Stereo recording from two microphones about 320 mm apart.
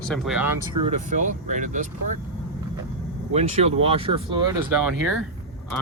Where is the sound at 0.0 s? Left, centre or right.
Centre.